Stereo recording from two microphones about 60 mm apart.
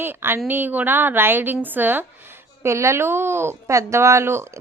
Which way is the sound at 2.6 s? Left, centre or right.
Right.